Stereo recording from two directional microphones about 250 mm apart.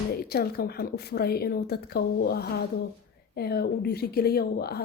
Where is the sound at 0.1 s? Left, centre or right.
Left.